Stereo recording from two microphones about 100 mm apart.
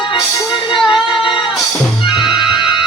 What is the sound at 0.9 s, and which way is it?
Music, 55° left (ahead or behind).